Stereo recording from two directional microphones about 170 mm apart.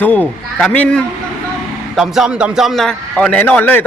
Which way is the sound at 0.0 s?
10° left (ahead or behind).